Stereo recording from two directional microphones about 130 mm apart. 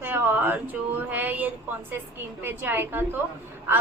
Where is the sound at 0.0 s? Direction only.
15° right (ahead or behind).